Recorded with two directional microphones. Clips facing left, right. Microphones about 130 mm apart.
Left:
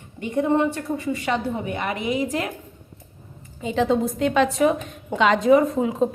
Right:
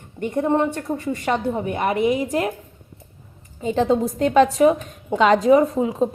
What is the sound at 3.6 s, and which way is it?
Speech, 40° right (ahead or behind).